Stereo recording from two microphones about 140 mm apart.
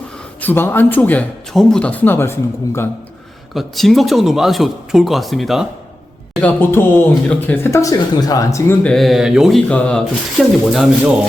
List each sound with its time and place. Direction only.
0.4 s speech: 15° left (ahead or behind)
3.5 s speech: centre (ahead or behind)
6.4 s speech: 15° left (ahead or behind)
8.8 s speech: 5° left (ahead or behind)